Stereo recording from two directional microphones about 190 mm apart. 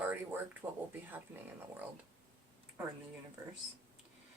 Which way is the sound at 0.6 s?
10° right (ahead or behind).